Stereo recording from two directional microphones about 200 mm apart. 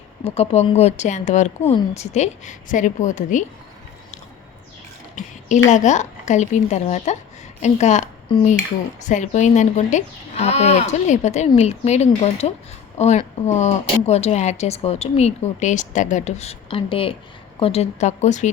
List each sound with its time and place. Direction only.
0.3 s speech: 30° left (ahead or behind)
5.2 s a woman's voice: 40° left (ahead or behind)